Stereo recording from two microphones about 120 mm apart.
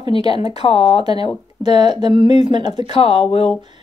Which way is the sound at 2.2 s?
75° left (ahead or behind).